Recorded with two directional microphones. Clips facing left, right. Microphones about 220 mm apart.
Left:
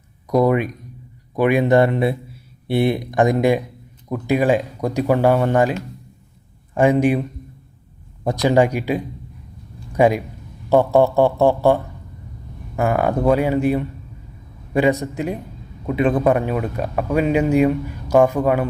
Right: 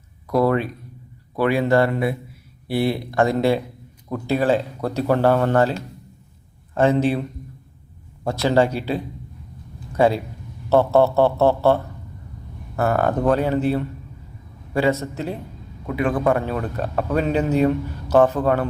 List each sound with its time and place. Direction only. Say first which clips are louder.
0.4 s a man's voice: left 2 dB; 15° left (ahead or behind)
6.7 s a man's voice: left 2 dB; 15° left (ahead or behind)